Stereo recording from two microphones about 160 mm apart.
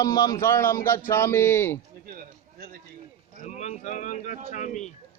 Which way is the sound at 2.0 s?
65° right (ahead or behind).